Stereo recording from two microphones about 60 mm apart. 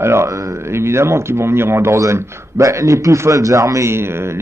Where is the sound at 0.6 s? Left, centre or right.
Right.